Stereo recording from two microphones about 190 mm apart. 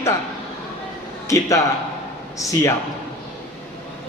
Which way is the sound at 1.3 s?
15° left (ahead or behind).